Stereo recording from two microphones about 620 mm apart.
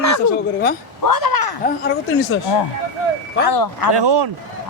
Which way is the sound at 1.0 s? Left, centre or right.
Left.